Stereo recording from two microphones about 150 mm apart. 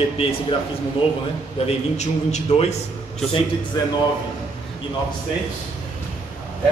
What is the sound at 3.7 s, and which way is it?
Speech, 25° left (ahead or behind).